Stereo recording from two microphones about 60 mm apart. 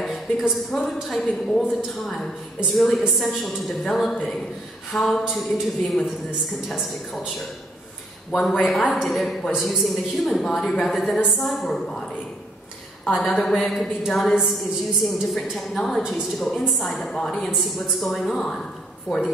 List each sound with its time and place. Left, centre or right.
0.0 s a woman's voice: centre
5.2 s a woman's voice: centre
8.3 s a woman's voice: centre
13.1 s a woman's voice: centre